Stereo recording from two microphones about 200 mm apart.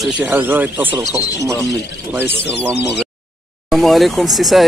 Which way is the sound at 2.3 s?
60° left (ahead or behind).